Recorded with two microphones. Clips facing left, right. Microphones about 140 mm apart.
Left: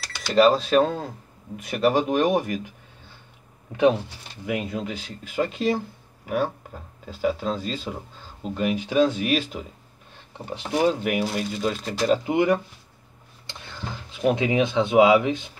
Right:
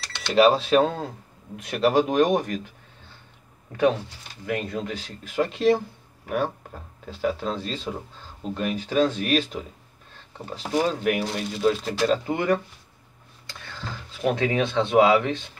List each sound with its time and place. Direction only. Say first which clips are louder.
0.0 s speech: even; 5° left (ahead or behind)
4.5 s speech: even; 10° left (ahead or behind)
10.7 s speech: left 1 dB; 5° left (ahead or behind)
12.1 s speech: left 5 dB; 15° left (ahead or behind)
14.3 s speech: left 1 dB; 15° left (ahead or behind)